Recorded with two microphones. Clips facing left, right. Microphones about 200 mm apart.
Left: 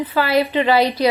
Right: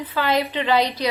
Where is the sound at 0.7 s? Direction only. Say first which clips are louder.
Left 3 dB; 10° left (ahead or behind).